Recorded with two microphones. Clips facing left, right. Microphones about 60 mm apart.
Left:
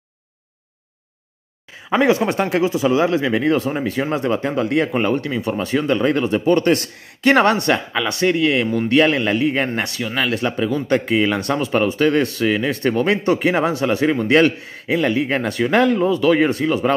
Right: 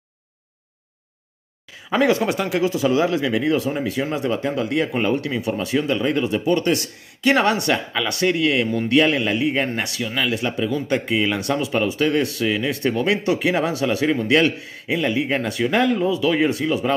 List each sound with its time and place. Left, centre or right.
1.9 s speech: left
14.1 s speech: left